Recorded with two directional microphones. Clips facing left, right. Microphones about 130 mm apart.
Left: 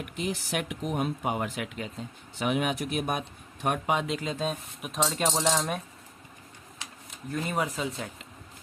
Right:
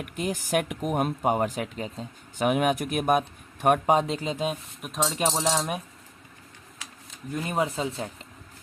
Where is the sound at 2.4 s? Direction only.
50° right (ahead or behind).